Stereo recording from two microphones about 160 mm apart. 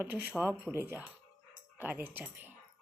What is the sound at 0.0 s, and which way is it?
Speech, 10° right (ahead or behind).